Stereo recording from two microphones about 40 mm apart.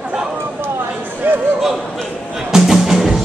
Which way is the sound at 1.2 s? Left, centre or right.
Right.